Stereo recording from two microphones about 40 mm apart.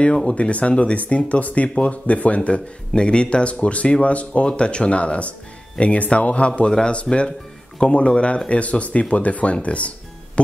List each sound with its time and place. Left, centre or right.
0.0 s speech: left